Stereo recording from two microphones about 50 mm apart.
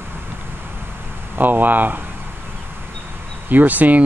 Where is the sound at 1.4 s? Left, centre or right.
Right.